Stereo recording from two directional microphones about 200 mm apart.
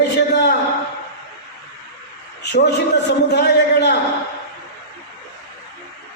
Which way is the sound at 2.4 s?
55° left (ahead or behind).